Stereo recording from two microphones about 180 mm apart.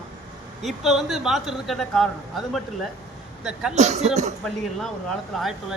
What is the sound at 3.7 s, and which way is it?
Speech, 40° right (ahead or behind).